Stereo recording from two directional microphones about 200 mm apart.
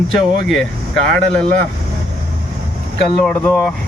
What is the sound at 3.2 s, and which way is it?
Speech, 10° left (ahead or behind).